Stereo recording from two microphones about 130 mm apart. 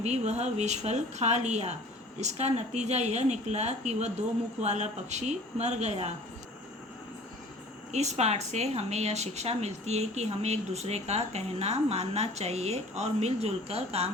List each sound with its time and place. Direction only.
0.0 s a woman's voice: 60° right (ahead or behind)
7.9 s a woman's voice: 60° right (ahead or behind)